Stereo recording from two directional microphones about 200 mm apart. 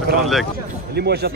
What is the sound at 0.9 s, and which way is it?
Speech, 55° right (ahead or behind).